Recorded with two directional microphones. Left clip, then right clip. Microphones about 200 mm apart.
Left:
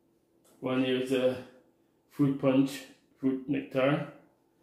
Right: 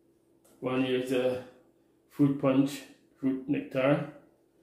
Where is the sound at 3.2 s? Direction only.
10° left (ahead or behind).